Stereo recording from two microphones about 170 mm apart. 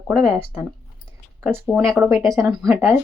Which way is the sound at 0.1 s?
5° right (ahead or behind).